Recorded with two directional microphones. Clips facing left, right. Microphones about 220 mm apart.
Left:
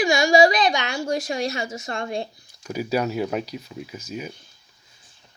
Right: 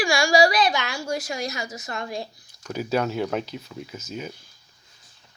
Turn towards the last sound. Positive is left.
turn(degrees=10)  # may be behind; listen again after turning